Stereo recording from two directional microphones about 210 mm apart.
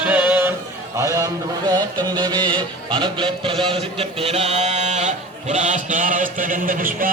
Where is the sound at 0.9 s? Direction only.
15° right (ahead or behind).